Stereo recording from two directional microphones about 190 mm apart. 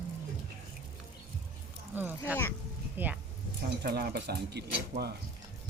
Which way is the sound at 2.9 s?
10° right (ahead or behind).